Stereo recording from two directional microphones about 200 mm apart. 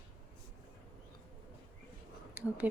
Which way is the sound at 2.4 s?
10° right (ahead or behind).